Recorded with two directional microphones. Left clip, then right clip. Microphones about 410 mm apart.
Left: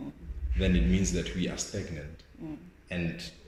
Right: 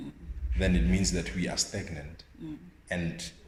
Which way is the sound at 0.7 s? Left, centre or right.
Centre.